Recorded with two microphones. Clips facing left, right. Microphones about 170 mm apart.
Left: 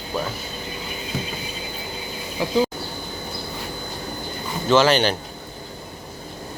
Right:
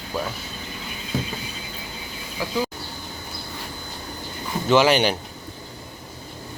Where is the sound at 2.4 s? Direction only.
25° left (ahead or behind).